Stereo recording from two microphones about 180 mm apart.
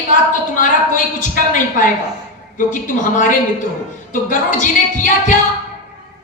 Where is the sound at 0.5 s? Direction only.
45° left (ahead or behind).